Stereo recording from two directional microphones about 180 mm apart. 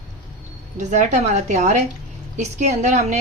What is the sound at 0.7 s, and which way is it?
Speech, 40° right (ahead or behind).